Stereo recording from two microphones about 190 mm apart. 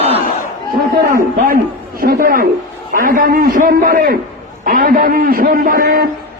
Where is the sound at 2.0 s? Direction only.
50° right (ahead or behind).